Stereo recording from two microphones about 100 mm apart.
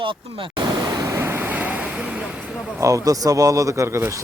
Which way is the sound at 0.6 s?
40° right (ahead or behind).